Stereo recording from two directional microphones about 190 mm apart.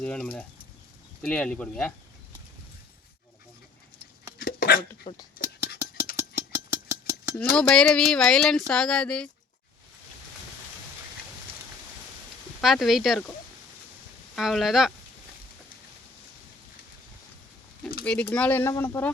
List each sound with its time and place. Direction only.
0.0 s speech: 5° left (ahead or behind)
4.4 s dog: 50° left (ahead or behind)
5.1 s speech: 30° left (ahead or behind)
6.1 s engine: 15° right (ahead or behind)
7.5 s speech: 5° left (ahead or behind)
12.6 s speech: centre (ahead or behind)
14.3 s speech: centre (ahead or behind)
18.0 s speech: 5° left (ahead or behind)